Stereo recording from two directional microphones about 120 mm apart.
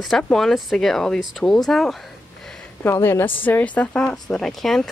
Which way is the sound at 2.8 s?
20° left (ahead or behind).